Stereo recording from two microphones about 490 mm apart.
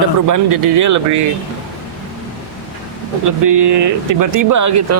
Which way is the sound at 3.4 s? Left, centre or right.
Right.